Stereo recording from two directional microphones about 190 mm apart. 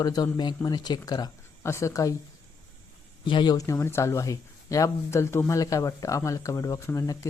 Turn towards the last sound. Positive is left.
turn(degrees=15)  # may be behind; listen again after turning